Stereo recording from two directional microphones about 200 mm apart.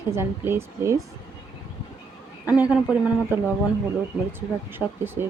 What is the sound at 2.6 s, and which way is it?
Speech, 5° right (ahead or behind).